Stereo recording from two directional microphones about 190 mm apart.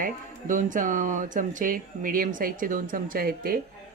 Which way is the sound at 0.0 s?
45° right (ahead or behind).